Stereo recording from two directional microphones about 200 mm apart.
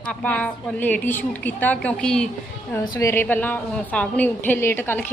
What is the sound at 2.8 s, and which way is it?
A woman's voice, 15° left (ahead or behind).